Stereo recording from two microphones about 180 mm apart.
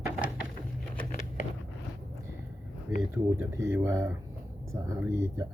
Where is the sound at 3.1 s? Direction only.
15° right (ahead or behind).